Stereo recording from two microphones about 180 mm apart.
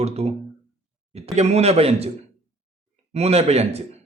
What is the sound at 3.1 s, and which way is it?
Speech, 35° right (ahead or behind).